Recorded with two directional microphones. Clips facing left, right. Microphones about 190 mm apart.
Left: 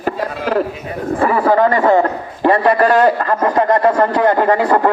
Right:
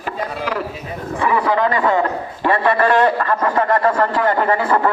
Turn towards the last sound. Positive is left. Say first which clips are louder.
# left 4 dB
turn(degrees=40)  # may be behind; listen again after turning